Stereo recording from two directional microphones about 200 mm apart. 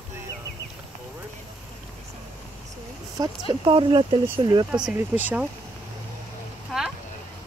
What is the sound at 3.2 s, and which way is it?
Speech, 25° right (ahead or behind).